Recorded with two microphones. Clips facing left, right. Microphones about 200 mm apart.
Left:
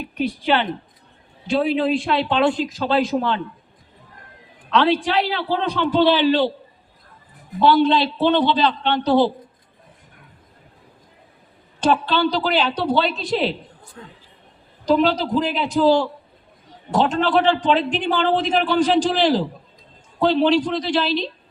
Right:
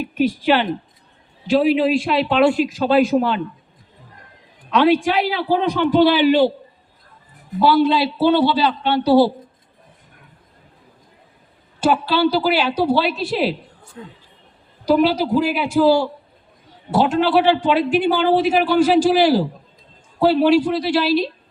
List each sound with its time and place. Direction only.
0.0 s a man's voice: 5° right (ahead or behind)
4.7 s a man's voice: 15° right (ahead or behind)
7.6 s a man's voice: 5° right (ahead or behind)
11.8 s a man's voice: 5° right (ahead or behind)
14.0 s a man's voice: 20° right (ahead or behind)